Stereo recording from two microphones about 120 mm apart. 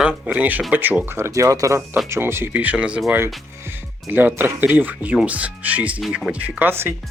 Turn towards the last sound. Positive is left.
turn(degrees=-20)  # may be behind; listen again after turning